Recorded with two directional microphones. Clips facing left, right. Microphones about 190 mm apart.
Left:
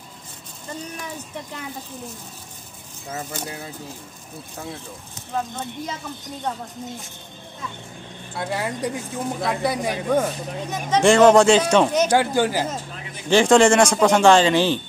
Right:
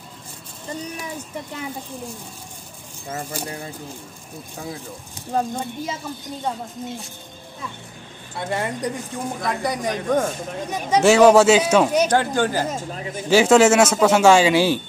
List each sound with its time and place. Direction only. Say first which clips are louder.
3.4 s speech: right 2 dB; 5° left (ahead or behind)
5.3 s speech: right 4 dB; 40° right (ahead or behind)
8.4 s speech: right 1 dB; centre (ahead or behind)
10.7 s speech: right 1 dB; 10° right (ahead or behind)
12.1 s speech: left 1 dB; 10° left (ahead or behind)
13.3 s speech: right 1 dB; 5° right (ahead or behind)